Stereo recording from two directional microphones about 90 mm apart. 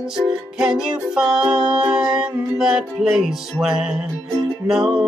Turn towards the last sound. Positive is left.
turn(degrees=-5)  # may be behind; listen again after turning